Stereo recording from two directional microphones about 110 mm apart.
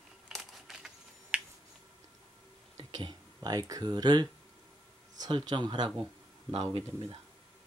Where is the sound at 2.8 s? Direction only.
45° right (ahead or behind).